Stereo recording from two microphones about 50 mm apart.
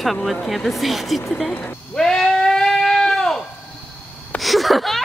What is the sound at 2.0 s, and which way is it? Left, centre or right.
Goat, centre.